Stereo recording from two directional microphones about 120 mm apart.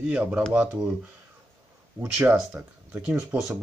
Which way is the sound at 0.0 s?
10° right (ahead or behind).